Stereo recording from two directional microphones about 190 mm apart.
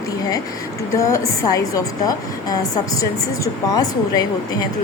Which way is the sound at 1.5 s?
20° left (ahead or behind).